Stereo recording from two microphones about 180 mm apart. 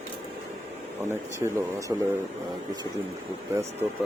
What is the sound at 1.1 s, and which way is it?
Speech, 15° right (ahead or behind).